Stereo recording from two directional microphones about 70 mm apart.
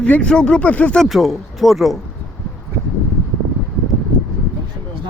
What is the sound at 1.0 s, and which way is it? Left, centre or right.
Speech, centre.